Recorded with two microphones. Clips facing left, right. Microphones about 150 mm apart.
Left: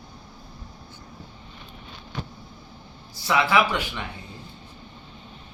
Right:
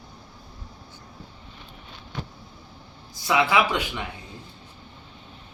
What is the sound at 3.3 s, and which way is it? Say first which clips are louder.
Speech: even; 15° right (ahead or behind).